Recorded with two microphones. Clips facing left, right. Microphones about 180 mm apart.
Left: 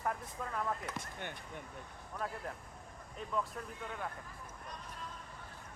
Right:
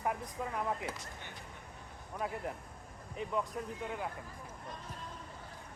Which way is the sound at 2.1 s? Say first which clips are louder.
Right 3 dB; 15° right (ahead or behind).